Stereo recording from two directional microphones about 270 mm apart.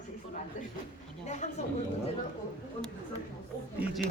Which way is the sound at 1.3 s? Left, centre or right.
Left.